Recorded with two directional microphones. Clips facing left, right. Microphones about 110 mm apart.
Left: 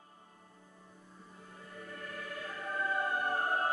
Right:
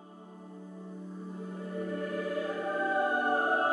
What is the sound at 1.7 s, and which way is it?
Music, 20° right (ahead or behind).